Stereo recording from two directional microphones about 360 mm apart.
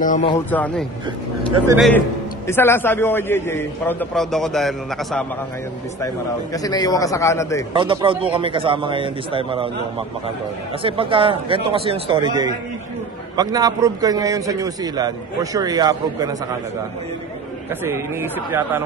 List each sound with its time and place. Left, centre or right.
0.0 s speech: centre
0.5 s a man's voice: centre
6.5 s a man's voice: centre
7.7 s a man's voice: centre
17.8 s a man's voice: centre